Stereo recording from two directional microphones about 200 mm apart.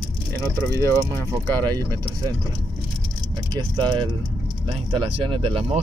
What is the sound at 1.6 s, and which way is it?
Speech, 20° right (ahead or behind).